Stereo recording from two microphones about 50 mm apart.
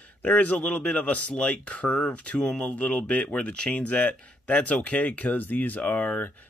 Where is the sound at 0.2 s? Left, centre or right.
Left.